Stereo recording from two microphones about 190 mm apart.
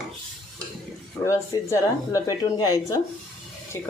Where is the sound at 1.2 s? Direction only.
15° left (ahead or behind).